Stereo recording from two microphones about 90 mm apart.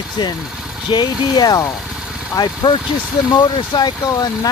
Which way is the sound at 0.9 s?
50° left (ahead or behind).